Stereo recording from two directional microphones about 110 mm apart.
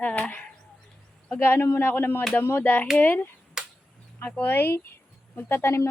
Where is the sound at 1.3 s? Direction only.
20° left (ahead or behind).